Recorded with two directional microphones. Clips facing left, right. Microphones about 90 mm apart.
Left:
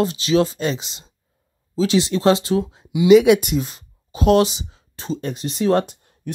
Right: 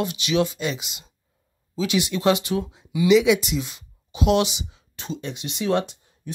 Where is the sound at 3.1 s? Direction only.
50° left (ahead or behind).